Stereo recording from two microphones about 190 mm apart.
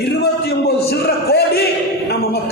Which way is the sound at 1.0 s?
55° left (ahead or behind).